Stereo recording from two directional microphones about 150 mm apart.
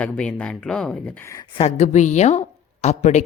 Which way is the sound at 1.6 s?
50° left (ahead or behind).